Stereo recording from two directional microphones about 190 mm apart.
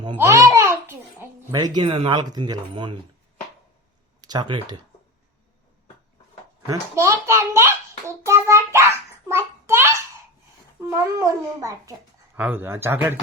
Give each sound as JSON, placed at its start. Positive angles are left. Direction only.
{"t": 0.2, "sound": "a sound", "side_deg": -15}
{"t": 1.8, "sound": "speech", "side_deg": -30}
{"t": 4.2, "sound": "speech", "side_deg": -20}
{"t": 6.7, "sound": "a child's voice", "side_deg": -15}
{"t": 9.3, "sound": "a sound", "side_deg": -15}
{"t": 10.8, "sound": "a child's voice", "side_deg": -15}